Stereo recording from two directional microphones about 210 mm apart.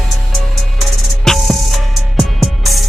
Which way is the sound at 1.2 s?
Centre (ahead or behind).